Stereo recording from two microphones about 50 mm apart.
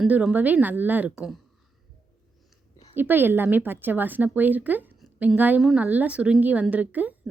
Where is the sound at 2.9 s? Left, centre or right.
Right.